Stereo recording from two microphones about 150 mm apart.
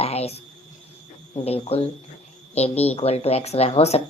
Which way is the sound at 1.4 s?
40° left (ahead or behind).